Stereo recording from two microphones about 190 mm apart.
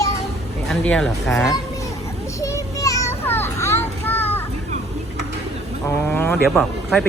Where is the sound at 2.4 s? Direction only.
20° left (ahead or behind).